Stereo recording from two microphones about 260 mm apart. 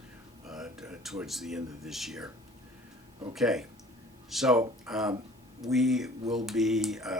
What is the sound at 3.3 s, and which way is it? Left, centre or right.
Speech, centre.